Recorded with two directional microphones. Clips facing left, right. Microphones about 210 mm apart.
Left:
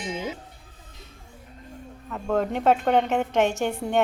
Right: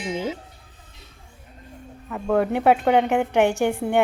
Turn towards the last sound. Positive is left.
turn(degrees=-10)  # may be behind; listen again after turning